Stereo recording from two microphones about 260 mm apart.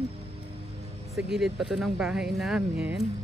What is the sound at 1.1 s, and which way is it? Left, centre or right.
Speech, centre.